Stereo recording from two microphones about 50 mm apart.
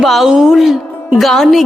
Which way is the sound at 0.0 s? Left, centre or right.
Centre.